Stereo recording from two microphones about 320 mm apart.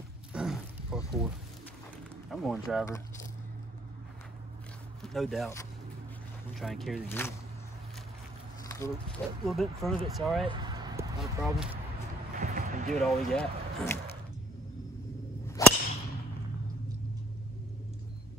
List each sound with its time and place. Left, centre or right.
0.3 s a sound: centre
2.2 s speech: centre
5.0 s speech: centre
8.6 s a sound: centre
9.5 s speech: centre
10.4 s speech: centre
12.4 s music: right
12.9 s speech: centre
15.4 s whip: centre